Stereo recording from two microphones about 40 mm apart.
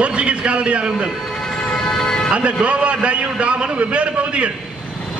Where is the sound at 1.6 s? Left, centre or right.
Left.